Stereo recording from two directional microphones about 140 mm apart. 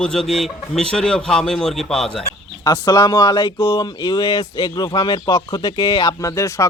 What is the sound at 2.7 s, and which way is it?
Speech, 30° left (ahead or behind).